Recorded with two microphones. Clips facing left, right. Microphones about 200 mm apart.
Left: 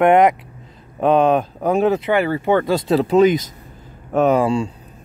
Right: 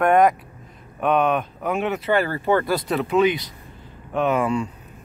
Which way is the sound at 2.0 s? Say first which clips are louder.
Left 3 dB; 20° left (ahead or behind).